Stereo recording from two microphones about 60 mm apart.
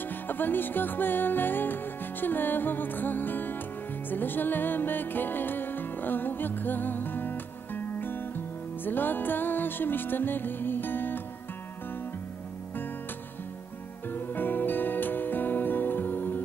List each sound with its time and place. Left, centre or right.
0.0 s music: left
14.0 s music: left